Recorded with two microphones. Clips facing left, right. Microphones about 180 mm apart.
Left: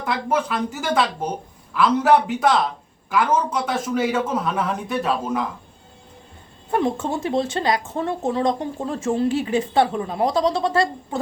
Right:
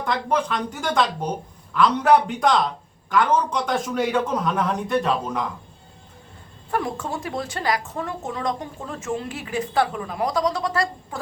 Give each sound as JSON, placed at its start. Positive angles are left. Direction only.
{"t": 0.0, "sound": "a man's voice", "side_deg": 5}
{"t": 6.7, "sound": "speech", "side_deg": 25}